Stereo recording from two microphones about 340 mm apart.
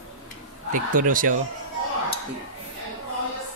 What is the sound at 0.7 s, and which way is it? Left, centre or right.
Speech, right.